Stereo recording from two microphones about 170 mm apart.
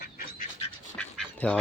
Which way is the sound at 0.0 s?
55° left (ahead or behind).